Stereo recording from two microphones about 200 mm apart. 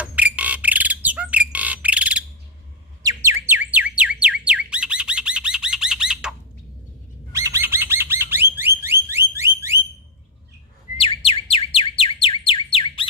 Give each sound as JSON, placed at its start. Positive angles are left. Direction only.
{"t": 0.0, "sound": "bird", "side_deg": -5}
{"t": 3.0, "sound": "a sound", "side_deg": -15}
{"t": 7.3, "sound": "bird", "side_deg": -15}
{"t": 11.0, "sound": "bird", "side_deg": 30}